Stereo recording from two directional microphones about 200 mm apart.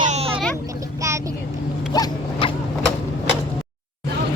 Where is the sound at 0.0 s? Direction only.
30° right (ahead or behind).